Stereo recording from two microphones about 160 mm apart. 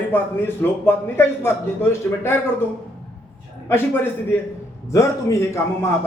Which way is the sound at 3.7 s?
15° left (ahead or behind).